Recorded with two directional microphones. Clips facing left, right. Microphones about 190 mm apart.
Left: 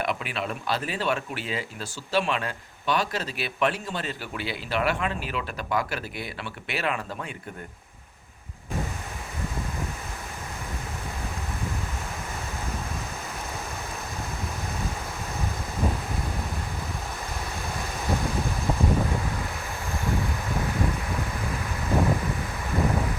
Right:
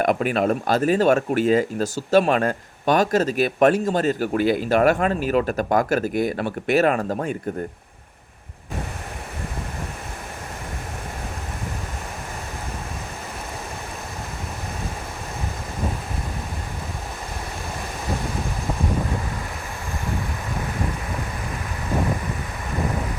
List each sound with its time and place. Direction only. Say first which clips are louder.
0.0 s speech: right 10 dB; 45° right (ahead or behind)